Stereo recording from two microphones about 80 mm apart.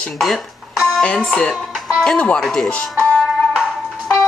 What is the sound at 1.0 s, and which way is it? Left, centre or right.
Speech, centre.